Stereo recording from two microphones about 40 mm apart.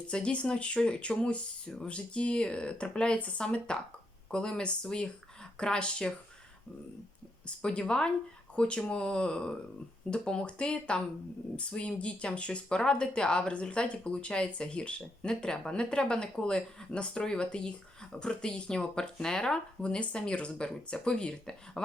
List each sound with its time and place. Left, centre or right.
0.1 s speech: left
7.4 s speech: left